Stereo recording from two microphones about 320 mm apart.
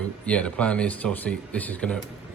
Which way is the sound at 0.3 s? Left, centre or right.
Centre.